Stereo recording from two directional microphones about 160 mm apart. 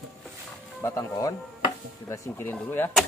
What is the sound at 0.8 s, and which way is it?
Speech, 20° left (ahead or behind).